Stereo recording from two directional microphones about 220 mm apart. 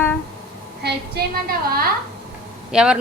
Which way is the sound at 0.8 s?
50° right (ahead or behind).